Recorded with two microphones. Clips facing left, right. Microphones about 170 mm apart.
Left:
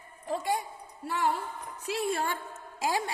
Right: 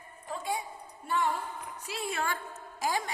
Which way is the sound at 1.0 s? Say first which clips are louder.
Even; 80° left.